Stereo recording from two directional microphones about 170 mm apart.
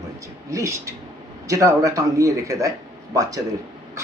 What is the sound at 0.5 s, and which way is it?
Speech, 20° right (ahead or behind).